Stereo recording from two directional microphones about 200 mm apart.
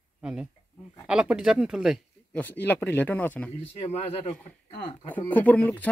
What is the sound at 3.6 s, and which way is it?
Speech, 30° left (ahead or behind).